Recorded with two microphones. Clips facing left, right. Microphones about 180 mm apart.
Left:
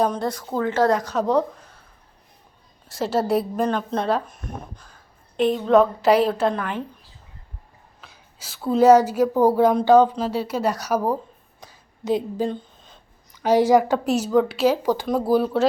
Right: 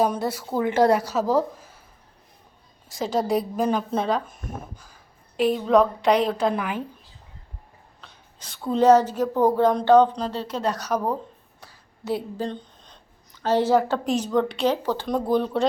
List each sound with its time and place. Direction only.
0.0 s a woman's voice: 5° right (ahead or behind)
2.9 s speech: 5° left (ahead or behind)
6.5 s a woman's voice: 5° right (ahead or behind)
8.0 s a woman's voice: 5° left (ahead or behind)
11.6 s a sound: 20° left (ahead or behind)
12.5 s a woman's voice: 5° left (ahead or behind)